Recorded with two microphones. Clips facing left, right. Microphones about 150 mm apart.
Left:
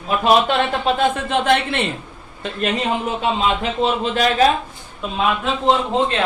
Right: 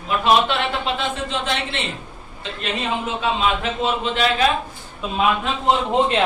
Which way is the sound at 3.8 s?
35° left (ahead or behind).